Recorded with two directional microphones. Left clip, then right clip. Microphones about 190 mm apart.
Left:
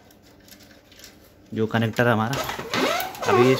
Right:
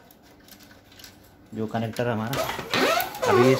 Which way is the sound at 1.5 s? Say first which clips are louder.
Left 5 dB; 50° left (ahead or behind).